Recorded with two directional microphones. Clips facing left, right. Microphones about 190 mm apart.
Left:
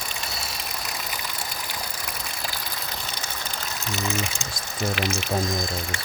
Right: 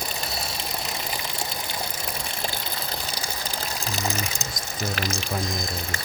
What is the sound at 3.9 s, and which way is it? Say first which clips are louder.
Speech: left 2 dB; 35° right (ahead or behind).